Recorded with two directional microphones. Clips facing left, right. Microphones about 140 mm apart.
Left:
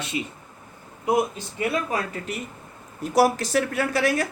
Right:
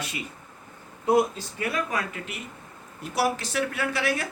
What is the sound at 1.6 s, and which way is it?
Speech, 35° left (ahead or behind).